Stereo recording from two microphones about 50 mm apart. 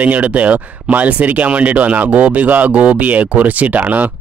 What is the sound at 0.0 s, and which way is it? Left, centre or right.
Speech, right.